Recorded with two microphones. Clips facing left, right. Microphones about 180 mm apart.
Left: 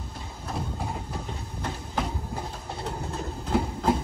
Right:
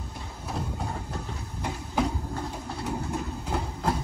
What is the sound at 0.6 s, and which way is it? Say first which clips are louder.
Train: even; 10° left (ahead or behind).